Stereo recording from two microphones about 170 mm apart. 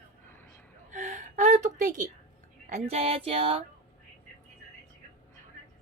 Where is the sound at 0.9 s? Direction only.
45° right (ahead or behind).